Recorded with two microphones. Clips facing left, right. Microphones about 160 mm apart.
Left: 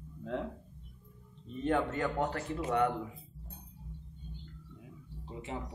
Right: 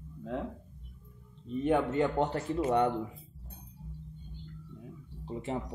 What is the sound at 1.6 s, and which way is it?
A man's voice, 20° right (ahead or behind).